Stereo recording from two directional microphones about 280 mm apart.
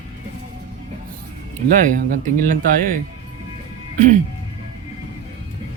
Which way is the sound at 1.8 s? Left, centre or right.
Right.